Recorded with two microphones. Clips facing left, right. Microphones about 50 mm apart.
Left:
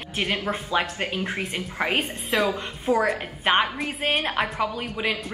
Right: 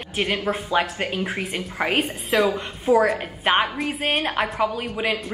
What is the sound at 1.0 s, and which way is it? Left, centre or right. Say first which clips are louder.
Speech: right 2 dB; right.